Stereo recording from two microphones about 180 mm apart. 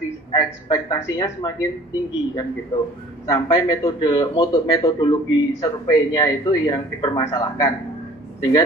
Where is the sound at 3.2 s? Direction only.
20° left (ahead or behind).